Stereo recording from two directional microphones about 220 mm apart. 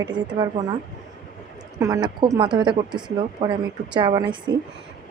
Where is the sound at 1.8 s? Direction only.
15° right (ahead or behind).